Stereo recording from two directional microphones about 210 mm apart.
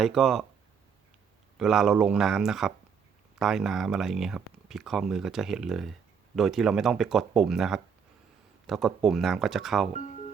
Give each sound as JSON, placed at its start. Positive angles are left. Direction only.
{"t": 0.0, "sound": "speech", "side_deg": 0}
{"t": 1.5, "sound": "speech", "side_deg": 0}
{"t": 10.0, "sound": "music", "side_deg": 35}